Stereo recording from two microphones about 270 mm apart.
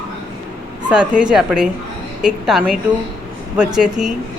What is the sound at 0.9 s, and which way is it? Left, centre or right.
Speech, centre.